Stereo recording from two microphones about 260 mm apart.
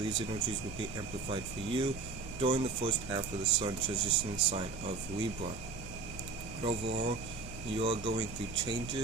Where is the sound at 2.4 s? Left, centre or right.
Right.